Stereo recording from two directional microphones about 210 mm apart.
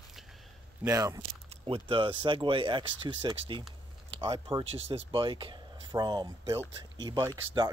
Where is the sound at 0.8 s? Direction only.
15° right (ahead or behind).